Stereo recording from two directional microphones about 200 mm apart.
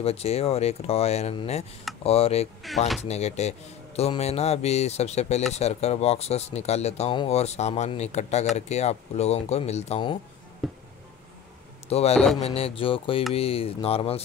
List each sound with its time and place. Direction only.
0.0 s speech: 30° left (ahead or behind)
10.6 s a sound: centre (ahead or behind)
11.9 s speech: 30° left (ahead or behind)